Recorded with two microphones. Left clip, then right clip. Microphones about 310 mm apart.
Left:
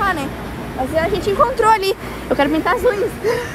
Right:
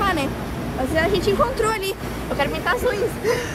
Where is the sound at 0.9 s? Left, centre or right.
Centre; by 3.0 s left.